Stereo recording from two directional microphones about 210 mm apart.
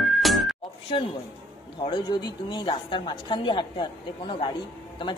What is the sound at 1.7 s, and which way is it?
A woman's voice, 25° left (ahead or behind).